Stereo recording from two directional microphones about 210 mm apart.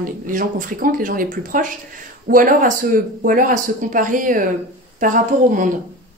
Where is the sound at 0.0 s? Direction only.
40° right (ahead or behind).